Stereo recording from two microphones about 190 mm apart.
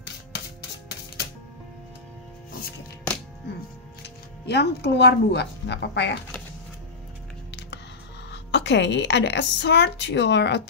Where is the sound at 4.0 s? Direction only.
60° left (ahead or behind).